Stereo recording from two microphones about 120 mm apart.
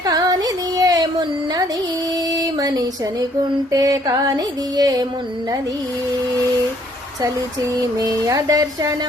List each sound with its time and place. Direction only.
0.0 s music: 30° right (ahead or behind)
2.3 s a sound: 30° right (ahead or behind)
3.7 s music: 30° right (ahead or behind)
7.8 s music: 30° right (ahead or behind)